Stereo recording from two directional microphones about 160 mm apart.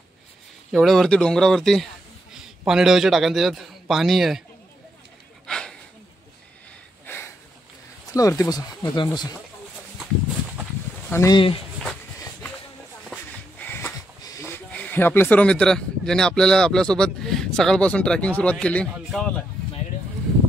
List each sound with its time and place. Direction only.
0.7 s a man's voice: centre (ahead or behind)
5.5 s a sound: 5° left (ahead or behind)
8.1 s speech: 20° left (ahead or behind)
11.1 s speech: 15° left (ahead or behind)
11.3 s speech: 35° left (ahead or behind)
13.1 s speech: 10° left (ahead or behind)